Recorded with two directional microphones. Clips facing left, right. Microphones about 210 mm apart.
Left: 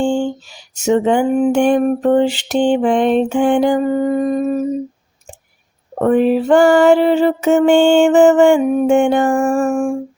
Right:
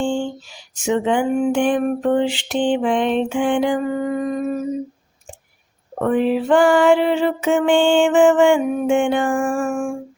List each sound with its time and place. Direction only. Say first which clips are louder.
0.0 s a sound: left 5 dB; 40° left (ahead or behind)
0.8 s music: left 5 dB; 40° left (ahead or behind)
6.0 s music: left 5 dB; 45° left (ahead or behind)